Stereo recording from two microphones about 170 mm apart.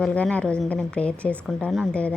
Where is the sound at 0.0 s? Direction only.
5° left (ahead or behind).